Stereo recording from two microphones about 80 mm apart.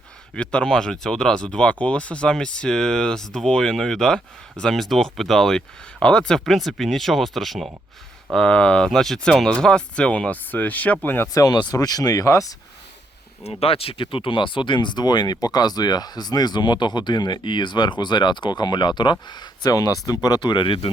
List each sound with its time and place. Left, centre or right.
0.3 s speech: centre
8.3 s speech: centre
11.3 s speech: left
14.0 s speech: left
19.3 s speech: left